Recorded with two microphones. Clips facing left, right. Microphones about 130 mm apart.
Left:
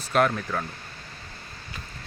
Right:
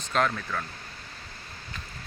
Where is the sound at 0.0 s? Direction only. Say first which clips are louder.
Left 4 dB; 10° left (ahead or behind).